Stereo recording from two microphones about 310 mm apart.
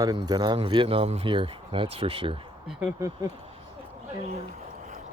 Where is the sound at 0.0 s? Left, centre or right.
Centre.